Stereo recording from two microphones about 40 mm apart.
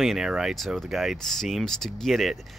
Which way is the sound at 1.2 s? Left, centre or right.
Centre.